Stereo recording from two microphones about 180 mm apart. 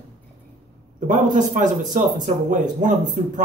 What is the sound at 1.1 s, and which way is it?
A man's voice, 45° right (ahead or behind).